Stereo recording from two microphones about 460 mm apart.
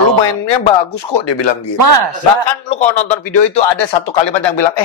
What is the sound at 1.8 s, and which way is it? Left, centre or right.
Speech, right.